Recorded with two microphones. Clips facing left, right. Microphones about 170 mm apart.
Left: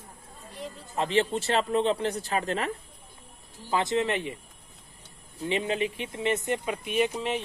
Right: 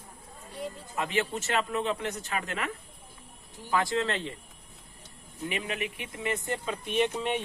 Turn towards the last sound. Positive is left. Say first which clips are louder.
# left 1 dB
turn(degrees=5)  # may be behind; listen again after turning